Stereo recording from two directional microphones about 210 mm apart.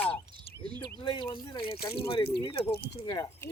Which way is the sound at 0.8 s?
20° left (ahead or behind).